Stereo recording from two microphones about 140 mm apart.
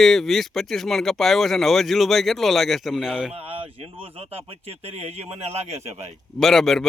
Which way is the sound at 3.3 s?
45° right (ahead or behind).